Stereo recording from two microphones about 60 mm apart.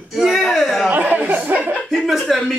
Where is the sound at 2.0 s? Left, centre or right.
Centre.